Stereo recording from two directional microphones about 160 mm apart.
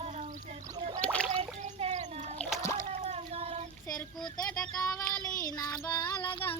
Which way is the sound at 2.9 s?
45° right (ahead or behind).